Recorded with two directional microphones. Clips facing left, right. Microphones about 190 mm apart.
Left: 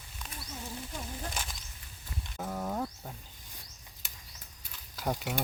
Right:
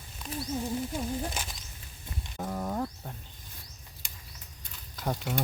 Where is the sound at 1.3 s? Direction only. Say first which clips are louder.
Right 2 dB; centre (ahead or behind).